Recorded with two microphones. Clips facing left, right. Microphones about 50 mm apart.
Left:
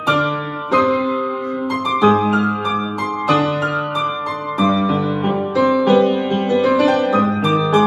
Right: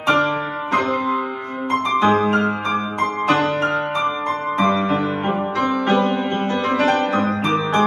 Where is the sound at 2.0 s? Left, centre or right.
Right.